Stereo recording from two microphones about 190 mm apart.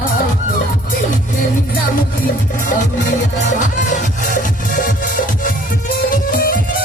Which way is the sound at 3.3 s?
40° left (ahead or behind).